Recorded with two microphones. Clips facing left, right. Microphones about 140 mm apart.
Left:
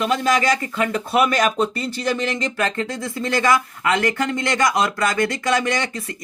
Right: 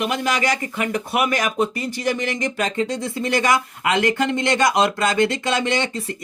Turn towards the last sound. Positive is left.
turn(degrees=-25)  # may be behind; listen again after turning